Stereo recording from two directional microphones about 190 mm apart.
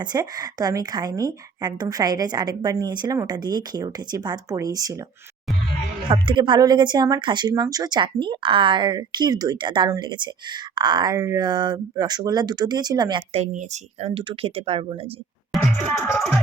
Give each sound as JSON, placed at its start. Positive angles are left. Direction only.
{"t": 0.0, "sound": "speech", "side_deg": -20}
{"t": 6.1, "sound": "speech", "side_deg": -25}
{"t": 13.4, "sound": "speech", "side_deg": -40}
{"t": 15.5, "sound": "music", "side_deg": 0}